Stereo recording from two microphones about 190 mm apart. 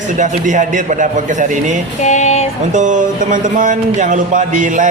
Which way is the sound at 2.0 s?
40° left (ahead or behind).